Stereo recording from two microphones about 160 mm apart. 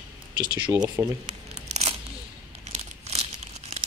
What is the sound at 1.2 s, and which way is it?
Tearing, 45° right (ahead or behind).